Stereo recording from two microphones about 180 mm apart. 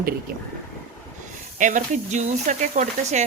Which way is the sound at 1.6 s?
45° right (ahead or behind).